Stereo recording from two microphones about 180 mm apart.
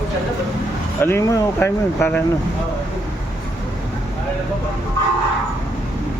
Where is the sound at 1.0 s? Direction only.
15° left (ahead or behind).